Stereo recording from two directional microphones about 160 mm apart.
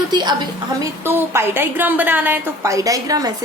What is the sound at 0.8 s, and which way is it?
A woman's voice, 15° right (ahead or behind).